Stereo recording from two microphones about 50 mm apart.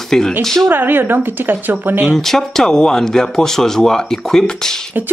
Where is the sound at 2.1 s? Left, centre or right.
Centre.